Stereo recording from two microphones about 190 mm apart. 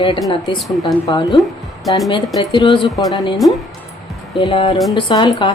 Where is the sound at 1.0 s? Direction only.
25° left (ahead or behind).